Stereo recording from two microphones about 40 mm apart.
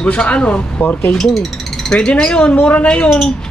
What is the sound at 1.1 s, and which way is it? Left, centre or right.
Speech, centre.